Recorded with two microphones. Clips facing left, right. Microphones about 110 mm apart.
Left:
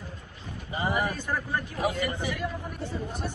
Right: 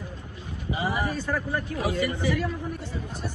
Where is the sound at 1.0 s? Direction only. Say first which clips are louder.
Right 2 dB; 15° left (ahead or behind).